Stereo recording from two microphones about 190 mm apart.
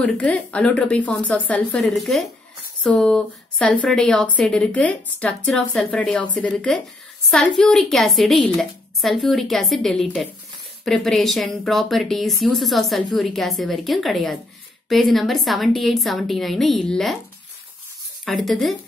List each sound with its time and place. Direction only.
0.0 s a woman's voice: 5° left (ahead or behind)
18.2 s speech: centre (ahead or behind)